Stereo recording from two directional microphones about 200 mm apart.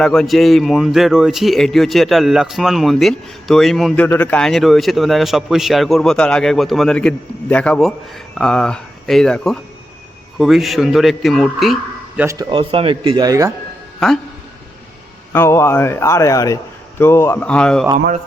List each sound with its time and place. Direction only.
0.0 s speech: centre (ahead or behind)
12.2 s speech: 15° right (ahead or behind)
15.3 s speech: 10° left (ahead or behind)